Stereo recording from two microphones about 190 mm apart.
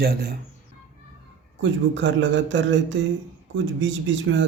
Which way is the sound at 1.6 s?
75° right (ahead or behind).